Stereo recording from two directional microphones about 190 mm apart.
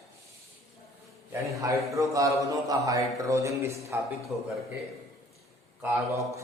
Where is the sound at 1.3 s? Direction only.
15° right (ahead or behind).